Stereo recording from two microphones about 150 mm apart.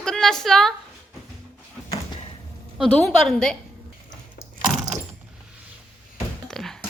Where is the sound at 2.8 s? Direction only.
Centre (ahead or behind).